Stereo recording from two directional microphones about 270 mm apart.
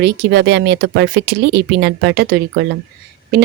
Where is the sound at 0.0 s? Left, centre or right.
Right.